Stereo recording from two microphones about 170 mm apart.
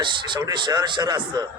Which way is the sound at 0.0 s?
25° right (ahead or behind).